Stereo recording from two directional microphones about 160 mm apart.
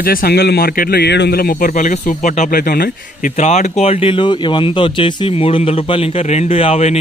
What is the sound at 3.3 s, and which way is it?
A man's voice, 45° left (ahead or behind).